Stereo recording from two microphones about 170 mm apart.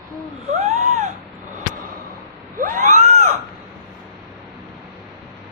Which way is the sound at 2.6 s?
50° right (ahead or behind).